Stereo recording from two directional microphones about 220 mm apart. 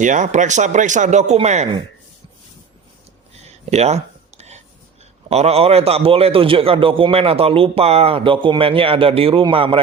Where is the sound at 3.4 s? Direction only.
30° right (ahead or behind).